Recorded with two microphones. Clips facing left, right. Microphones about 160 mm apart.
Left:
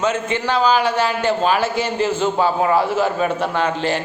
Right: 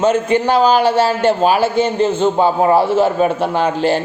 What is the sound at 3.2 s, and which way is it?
Speech, 5° right (ahead or behind).